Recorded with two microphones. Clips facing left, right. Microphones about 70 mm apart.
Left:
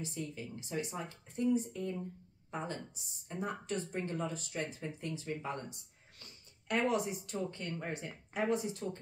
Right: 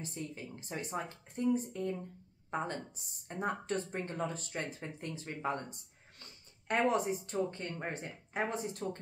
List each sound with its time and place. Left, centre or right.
0.0 s speech: right